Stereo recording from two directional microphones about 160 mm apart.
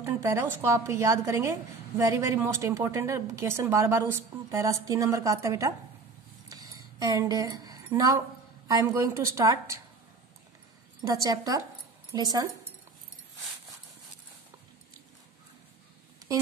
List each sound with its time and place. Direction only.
0.0 s a woman's voice: 15° right (ahead or behind)
6.5 s a sound: 20° right (ahead or behind)
8.6 s speech: 20° right (ahead or behind)
11.0 s speech: 20° right (ahead or behind)